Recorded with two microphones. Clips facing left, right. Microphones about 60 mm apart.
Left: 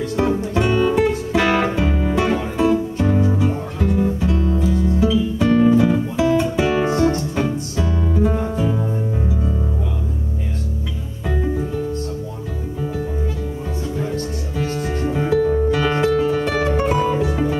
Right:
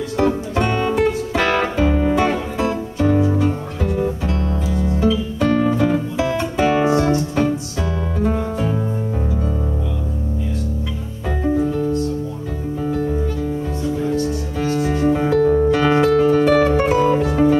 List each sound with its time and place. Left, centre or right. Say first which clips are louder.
0.2 s music: right 1 dB; centre
7.0 s keyboard: even; centre
15.0 s music: right 2 dB; centre